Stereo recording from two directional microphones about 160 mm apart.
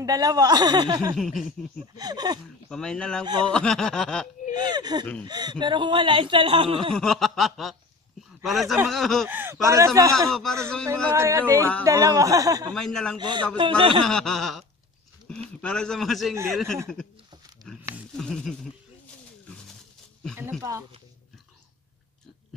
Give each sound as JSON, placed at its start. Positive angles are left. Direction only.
{"t": 0.0, "sound": "speech", "side_deg": -25}
{"t": 1.1, "sound": "speech", "side_deg": 0}
{"t": 2.0, "sound": "speech", "side_deg": -25}
{"t": 2.7, "sound": "speech", "side_deg": 5}
{"t": 4.6, "sound": "a man's voice", "side_deg": -25}
{"t": 7.0, "sound": "speech", "side_deg": 0}
{"t": 9.3, "sound": "speech", "side_deg": -15}
{"t": 10.3, "sound": "speech", "side_deg": 5}
{"t": 11.1, "sound": "a man's voice", "side_deg": -20}
{"t": 12.7, "sound": "speech", "side_deg": 5}
{"t": 13.2, "sound": "a man's voice", "side_deg": -30}
{"t": 14.0, "sound": "speech", "side_deg": 0}
{"t": 18.1, "sound": "speech", "side_deg": 5}